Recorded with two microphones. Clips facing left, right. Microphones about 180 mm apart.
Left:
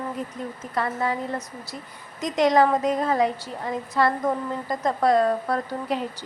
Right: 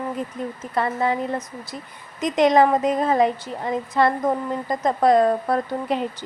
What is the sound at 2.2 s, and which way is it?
A woman's voice, 20° right (ahead or behind).